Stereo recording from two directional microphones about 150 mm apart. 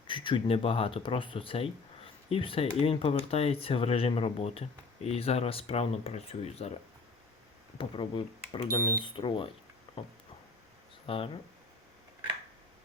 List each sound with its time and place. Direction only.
0.1 s speech: 35° left (ahead or behind)
7.8 s speech: 35° left (ahead or behind)
9.9 s a sound: 35° left (ahead or behind)
11.0 s speech: 40° left (ahead or behind)